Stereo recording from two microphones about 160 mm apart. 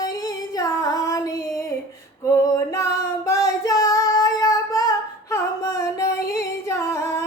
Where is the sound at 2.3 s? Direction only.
20° left (ahead or behind).